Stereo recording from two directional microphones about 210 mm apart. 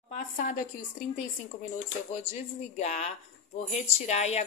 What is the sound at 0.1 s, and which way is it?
Speech, 40° left (ahead or behind).